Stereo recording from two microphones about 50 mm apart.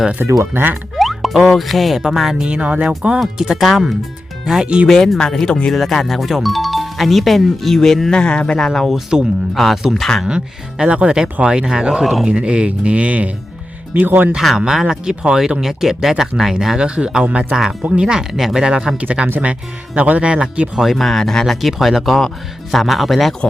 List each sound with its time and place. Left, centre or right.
0.2 s speech: right
0.9 s speech: centre
2.4 s speech: right
3.6 s speech: centre
4.6 s speech: right
4.9 s speech: centre
8.1 s speech: centre
8.6 s speech: centre
8.9 s speech: centre
9.9 s speech: centre
10.2 s speech: centre
13.9 s speech: right
14.3 s speech: centre
20.7 s speech: centre